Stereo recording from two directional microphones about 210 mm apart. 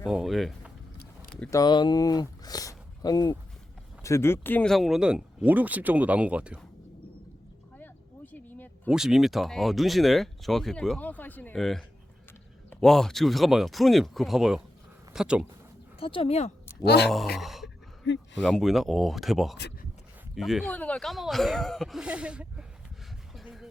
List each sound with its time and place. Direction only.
0.0 s speech: centre (ahead or behind)
1.5 s speech: 20° left (ahead or behind); by 6.7 s 5° right (ahead or behind)
7.8 s a sound: 10° left (ahead or behind)
8.9 s speech: centre (ahead or behind)
16.0 s speech: 25° left (ahead or behind)
16.8 s speech: 50° left (ahead or behind)
17.3 s speech: centre (ahead or behind)
18.0 s speech: 55° left (ahead or behind)
18.4 s speech: centre (ahead or behind)
23.3 s a sound: centre (ahead or behind)